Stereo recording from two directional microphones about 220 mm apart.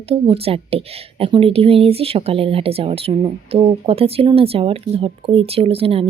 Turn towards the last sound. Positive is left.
turn(degrees=-25)  # may be behind; listen again after turning